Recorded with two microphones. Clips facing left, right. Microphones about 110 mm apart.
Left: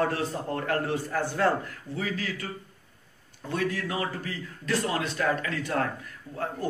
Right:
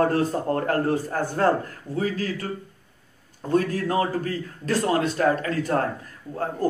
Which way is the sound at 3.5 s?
40° right (ahead or behind).